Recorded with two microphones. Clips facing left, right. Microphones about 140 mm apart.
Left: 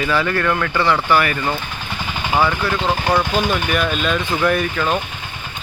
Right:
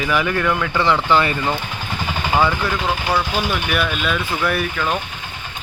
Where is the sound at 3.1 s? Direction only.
5° right (ahead or behind).